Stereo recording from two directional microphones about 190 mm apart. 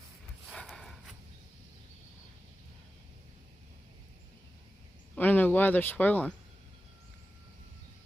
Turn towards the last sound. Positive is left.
turn(degrees=10)  # may be behind; listen again after turning